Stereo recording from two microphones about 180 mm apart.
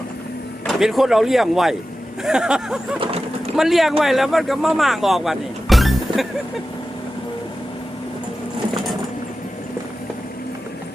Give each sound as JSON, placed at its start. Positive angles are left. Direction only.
{"t": 0.6, "sound": "speech", "side_deg": 0}
{"t": 3.0, "sound": "vehicle", "side_deg": -35}
{"t": 3.5, "sound": "speech", "side_deg": 0}